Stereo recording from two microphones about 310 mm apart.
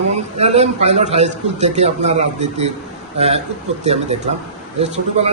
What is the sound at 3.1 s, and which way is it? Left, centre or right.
A man's voice, centre.